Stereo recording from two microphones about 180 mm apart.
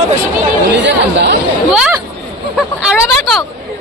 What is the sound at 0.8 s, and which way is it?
Chatter, 70° right (ahead or behind).